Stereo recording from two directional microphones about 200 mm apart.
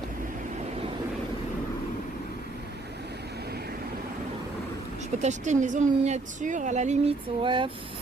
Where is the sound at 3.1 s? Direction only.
55° right (ahead or behind).